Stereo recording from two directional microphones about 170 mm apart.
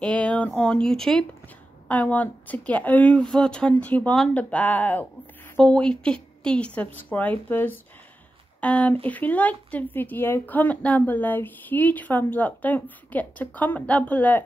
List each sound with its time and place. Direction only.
0.0 s speech: 5° left (ahead or behind)